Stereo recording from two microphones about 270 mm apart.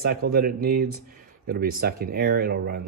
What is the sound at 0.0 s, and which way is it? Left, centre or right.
Speech, right.